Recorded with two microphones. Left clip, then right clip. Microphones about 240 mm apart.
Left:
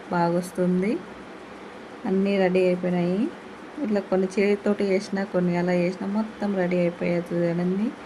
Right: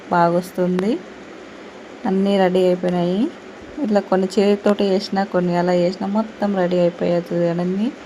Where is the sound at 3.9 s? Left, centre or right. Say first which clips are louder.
Right 7 dB; centre.